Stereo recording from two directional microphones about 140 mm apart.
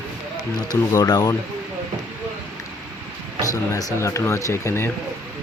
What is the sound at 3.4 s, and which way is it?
Speech, 25° left (ahead or behind).